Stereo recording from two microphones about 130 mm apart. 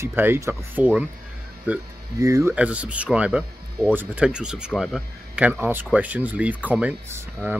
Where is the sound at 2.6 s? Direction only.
10° right (ahead or behind).